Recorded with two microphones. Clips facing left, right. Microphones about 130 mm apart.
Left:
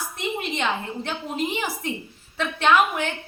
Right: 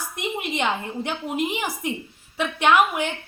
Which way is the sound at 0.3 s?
15° right (ahead or behind).